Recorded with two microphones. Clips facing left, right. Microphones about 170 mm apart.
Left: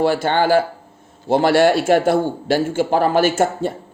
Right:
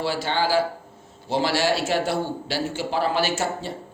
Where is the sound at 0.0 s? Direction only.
50° left (ahead or behind).